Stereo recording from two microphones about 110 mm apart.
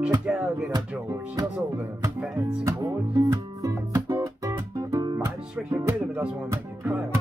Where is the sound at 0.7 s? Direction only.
35° right (ahead or behind).